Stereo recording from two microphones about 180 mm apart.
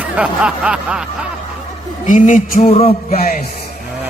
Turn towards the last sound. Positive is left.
turn(degrees=35)  # may be behind; listen again after turning